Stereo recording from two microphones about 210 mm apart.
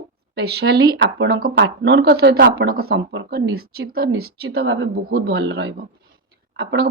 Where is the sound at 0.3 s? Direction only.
50° right (ahead or behind).